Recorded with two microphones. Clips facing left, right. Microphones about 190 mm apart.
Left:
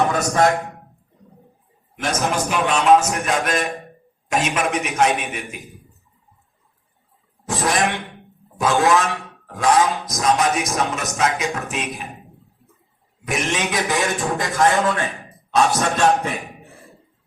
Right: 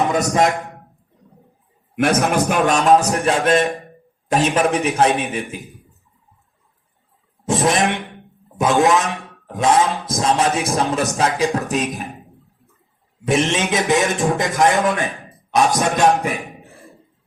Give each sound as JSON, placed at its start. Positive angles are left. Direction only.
{"t": 0.1, "sound": "a man's voice", "side_deg": -20}
{"t": 2.0, "sound": "a man's voice", "side_deg": -60}
{"t": 2.7, "sound": "a man's voice", "side_deg": -35}
{"t": 7.4, "sound": "a man's voice", "side_deg": -20}
{"t": 13.2, "sound": "a man's voice", "side_deg": -25}